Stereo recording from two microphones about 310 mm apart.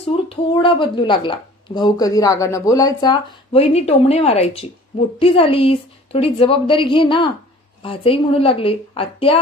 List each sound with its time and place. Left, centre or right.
0.0 s speech: centre